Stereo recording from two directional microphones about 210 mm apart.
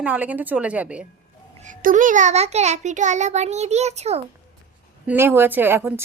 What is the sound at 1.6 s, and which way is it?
A child's voice, 40° right (ahead or behind).